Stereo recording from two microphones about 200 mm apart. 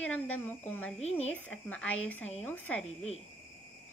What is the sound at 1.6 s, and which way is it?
Speech, 5° left (ahead or behind).